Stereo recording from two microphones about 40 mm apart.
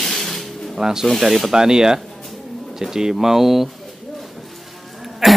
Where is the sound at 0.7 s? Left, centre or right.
Centre.